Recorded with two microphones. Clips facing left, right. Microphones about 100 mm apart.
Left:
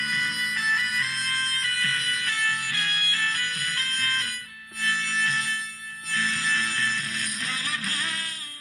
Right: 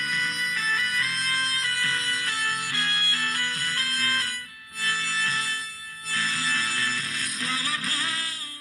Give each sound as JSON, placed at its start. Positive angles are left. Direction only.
{"t": 0.0, "sound": "bagpipes", "side_deg": -40}
{"t": 6.0, "sound": "music", "side_deg": -40}